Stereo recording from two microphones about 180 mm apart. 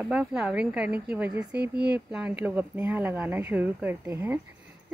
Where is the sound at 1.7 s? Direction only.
65° right (ahead or behind).